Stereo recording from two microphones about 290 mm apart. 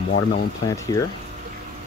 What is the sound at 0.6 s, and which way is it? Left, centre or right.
Speech, centre.